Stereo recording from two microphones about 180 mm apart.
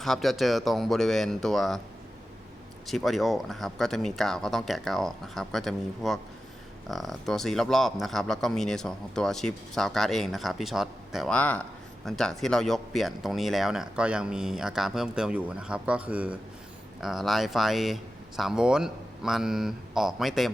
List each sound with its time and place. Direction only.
0.0 s speech: centre (ahead or behind)
2.8 s speech: centre (ahead or behind)